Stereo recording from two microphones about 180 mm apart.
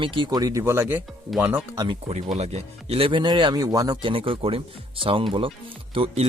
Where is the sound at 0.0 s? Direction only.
25° right (ahead or behind); by 1.6 s 10° right (ahead or behind).